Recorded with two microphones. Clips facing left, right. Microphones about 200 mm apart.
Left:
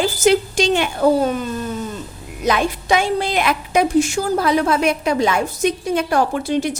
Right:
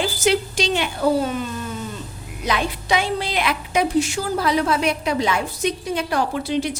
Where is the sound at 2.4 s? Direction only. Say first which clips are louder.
Left 5 dB; 45° left (ahead or behind).